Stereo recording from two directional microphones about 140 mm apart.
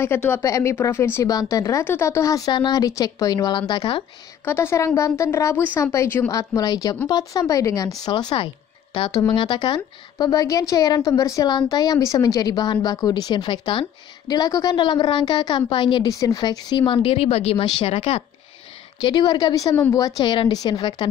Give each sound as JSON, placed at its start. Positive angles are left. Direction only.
{"t": 0.0, "sound": "a woman's voice", "side_deg": 15}
{"t": 4.5, "sound": "a woman's voice", "side_deg": 20}
{"t": 6.3, "sound": "a woman's voice", "side_deg": 25}
{"t": 16.0, "sound": "speech", "side_deg": 25}
{"t": 18.9, "sound": "a woman's voice", "side_deg": 35}